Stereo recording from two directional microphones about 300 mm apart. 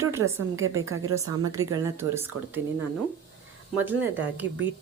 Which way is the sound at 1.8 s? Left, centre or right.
Centre.